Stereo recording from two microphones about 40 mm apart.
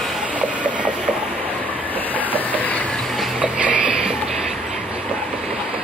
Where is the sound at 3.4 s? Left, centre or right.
Right.